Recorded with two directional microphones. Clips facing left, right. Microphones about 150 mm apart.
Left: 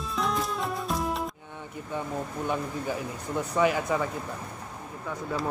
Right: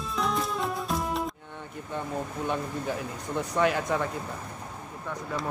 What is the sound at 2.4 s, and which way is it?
Speech, centre (ahead or behind).